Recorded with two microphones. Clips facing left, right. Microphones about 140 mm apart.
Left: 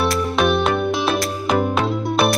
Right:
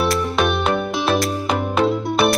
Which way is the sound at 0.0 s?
Centre (ahead or behind).